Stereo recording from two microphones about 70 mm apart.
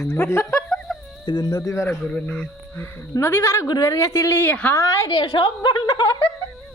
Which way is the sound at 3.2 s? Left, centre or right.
Left.